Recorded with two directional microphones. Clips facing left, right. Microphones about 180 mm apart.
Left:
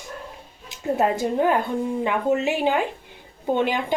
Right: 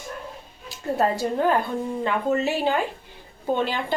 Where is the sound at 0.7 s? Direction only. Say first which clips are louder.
Left 1 dB; 20° left (ahead or behind).